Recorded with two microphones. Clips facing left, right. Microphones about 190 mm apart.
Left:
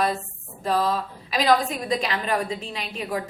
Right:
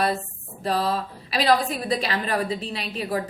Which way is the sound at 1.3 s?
35° right (ahead or behind).